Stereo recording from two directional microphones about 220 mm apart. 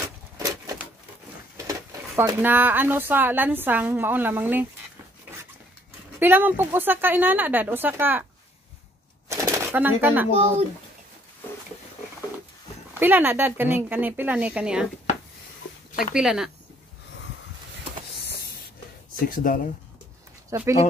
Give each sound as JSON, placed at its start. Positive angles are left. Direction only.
{"t": 0.4, "sound": "a sound", "side_deg": -15}
{"t": 1.6, "sound": "speech", "side_deg": -15}
{"t": 6.1, "sound": "speech", "side_deg": -10}
{"t": 9.3, "sound": "shuffling cards", "side_deg": -15}
{"t": 13.0, "sound": "speech", "side_deg": -10}
{"t": 16.2, "sound": "speech", "side_deg": -5}
{"t": 19.2, "sound": "speech", "side_deg": 40}
{"t": 20.4, "sound": "speech", "side_deg": -15}